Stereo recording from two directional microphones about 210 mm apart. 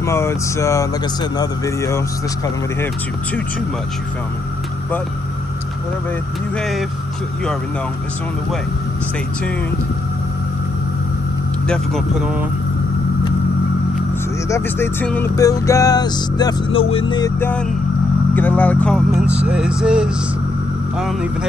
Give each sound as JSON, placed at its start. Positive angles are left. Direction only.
{"t": 0.0, "sound": "speech", "side_deg": 10}
{"t": 11.6, "sound": "speech", "side_deg": 0}
{"t": 14.5, "sound": "speech", "side_deg": 10}
{"t": 16.9, "sound": "music", "side_deg": 20}
{"t": 17.4, "sound": "speech", "side_deg": 10}